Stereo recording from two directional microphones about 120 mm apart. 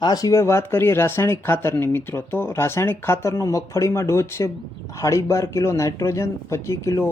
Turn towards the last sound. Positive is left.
turn(degrees=25)  # may be behind; listen again after turning